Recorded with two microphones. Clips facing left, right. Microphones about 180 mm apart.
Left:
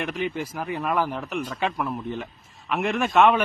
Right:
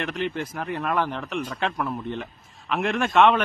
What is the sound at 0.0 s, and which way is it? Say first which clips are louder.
Speech: even; 5° left (ahead or behind).